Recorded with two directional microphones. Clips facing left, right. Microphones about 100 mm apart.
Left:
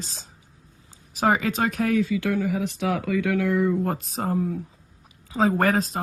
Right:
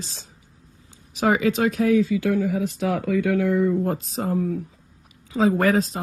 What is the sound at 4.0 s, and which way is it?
Speech, 50° left (ahead or behind).